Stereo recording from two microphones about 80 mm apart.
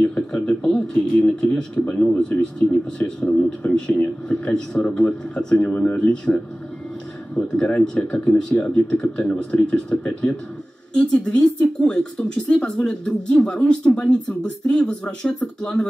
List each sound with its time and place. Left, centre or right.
0.0 s speech: centre